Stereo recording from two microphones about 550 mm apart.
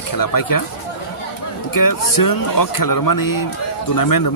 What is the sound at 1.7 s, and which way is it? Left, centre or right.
Speech, left.